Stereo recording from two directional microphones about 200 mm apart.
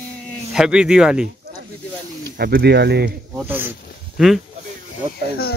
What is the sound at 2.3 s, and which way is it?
Speech, 50° right (ahead or behind).